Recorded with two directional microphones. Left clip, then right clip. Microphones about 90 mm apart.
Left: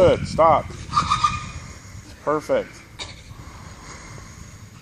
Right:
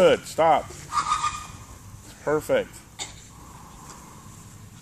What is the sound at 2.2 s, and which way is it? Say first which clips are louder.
Speech: left 2 dB; 15° right (ahead or behind).